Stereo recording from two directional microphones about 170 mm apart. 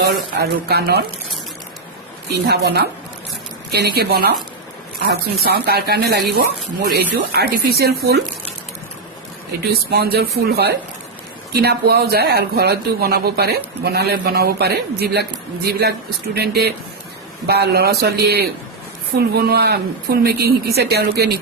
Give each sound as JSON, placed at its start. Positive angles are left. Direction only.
{"t": 0.0, "sound": "speech", "side_deg": -70}
{"t": 2.5, "sound": "speech", "side_deg": -75}
{"t": 9.9, "sound": "speech", "side_deg": -70}